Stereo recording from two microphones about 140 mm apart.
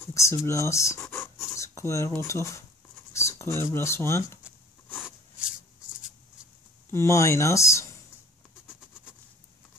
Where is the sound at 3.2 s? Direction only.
20° left (ahead or behind).